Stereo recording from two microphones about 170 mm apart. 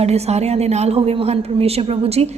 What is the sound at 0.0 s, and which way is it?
A woman's voice, 40° right (ahead or behind).